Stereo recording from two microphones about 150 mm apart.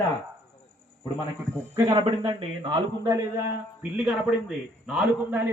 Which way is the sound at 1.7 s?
25° right (ahead or behind).